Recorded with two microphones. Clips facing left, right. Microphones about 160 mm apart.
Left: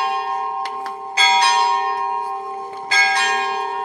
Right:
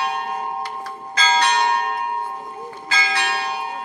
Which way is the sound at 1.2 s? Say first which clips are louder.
Left 2 dB; 10° left (ahead or behind).